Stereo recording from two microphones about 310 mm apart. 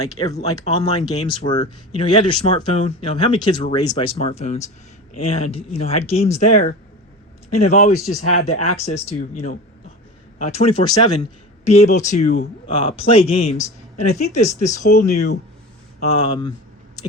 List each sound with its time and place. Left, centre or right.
0.1 s speech: centre
8.2 s speech: left
8.7 s speech: left